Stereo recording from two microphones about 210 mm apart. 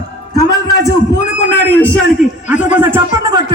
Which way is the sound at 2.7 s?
10° right (ahead or behind).